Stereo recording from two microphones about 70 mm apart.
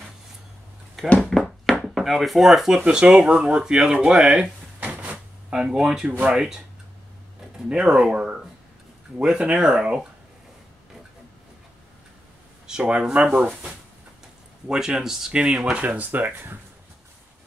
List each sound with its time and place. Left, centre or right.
1.0 s speech: centre
1.4 s a sound: centre
2.8 s speech: centre
4.7 s a sound: right
5.5 s speech: centre
7.5 s speech: centre
12.6 s speech: centre
14.7 s speech: centre
15.8 s speech: right